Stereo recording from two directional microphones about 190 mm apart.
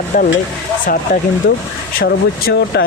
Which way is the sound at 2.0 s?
60° left (ahead or behind).